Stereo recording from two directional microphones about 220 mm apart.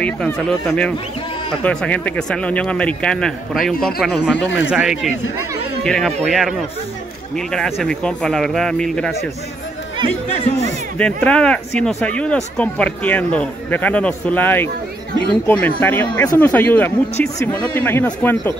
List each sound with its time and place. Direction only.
0.0 s speech: 5° left (ahead or behind)
4.4 s speech: 55° left (ahead or behind)
4.6 s speech: 5° right (ahead or behind)
10.3 s speech: 25° left (ahead or behind)
11.0 s speech: 5° left (ahead or behind)